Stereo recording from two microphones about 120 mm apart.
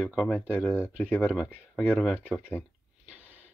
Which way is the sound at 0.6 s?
20° left (ahead or behind).